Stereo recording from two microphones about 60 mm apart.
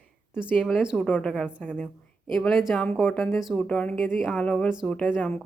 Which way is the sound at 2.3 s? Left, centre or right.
Centre.